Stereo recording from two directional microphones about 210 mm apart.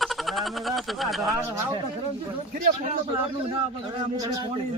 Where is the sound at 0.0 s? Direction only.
Centre (ahead or behind).